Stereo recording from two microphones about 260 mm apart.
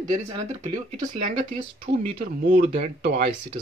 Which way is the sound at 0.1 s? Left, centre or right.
Right.